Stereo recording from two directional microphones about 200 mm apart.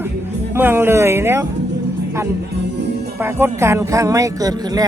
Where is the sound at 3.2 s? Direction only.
10° right (ahead or behind).